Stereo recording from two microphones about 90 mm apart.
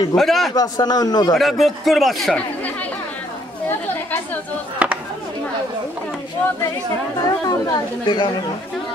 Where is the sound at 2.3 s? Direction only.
15° left (ahead or behind).